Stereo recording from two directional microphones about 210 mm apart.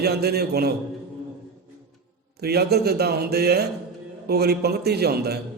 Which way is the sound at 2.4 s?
50° right (ahead or behind).